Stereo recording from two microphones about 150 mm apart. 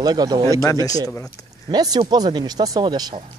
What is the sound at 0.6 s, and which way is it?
Speech, 20° left (ahead or behind).